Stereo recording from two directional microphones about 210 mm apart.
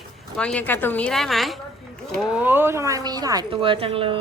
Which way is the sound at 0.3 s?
5° left (ahead or behind).